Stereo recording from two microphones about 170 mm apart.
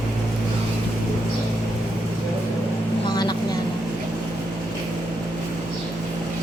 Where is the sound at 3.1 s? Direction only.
25° left (ahead or behind).